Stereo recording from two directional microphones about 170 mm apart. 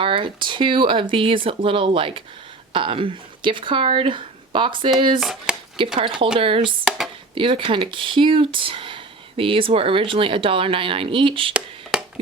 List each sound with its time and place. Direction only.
0.0 s speech: 30° right (ahead or behind)
5.2 s chopping: centre (ahead or behind)
6.0 s speech: 30° right (ahead or behind)
11.5 s a sound: 5° right (ahead or behind)